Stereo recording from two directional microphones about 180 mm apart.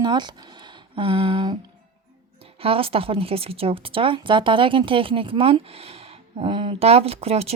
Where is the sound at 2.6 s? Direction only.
30° right (ahead or behind).